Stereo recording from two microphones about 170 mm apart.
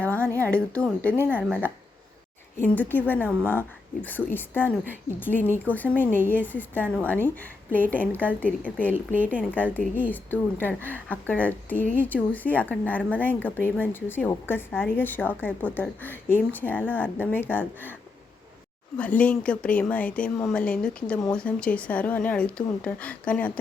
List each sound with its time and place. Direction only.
0.1 s a sound: 15° right (ahead or behind)
0.5 s a woman's voice: 5° left (ahead or behind)
1.1 s speech: 10° right (ahead or behind)
2.6 s a woman's voice: 10° left (ahead or behind)
8.9 s speech: 10° right (ahead or behind)
9.5 s a woman's voice: 10° left (ahead or behind)
18.9 s a woman's voice: 10° left (ahead or behind)